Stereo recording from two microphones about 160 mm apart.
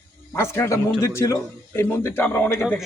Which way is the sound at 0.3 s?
15° left (ahead or behind).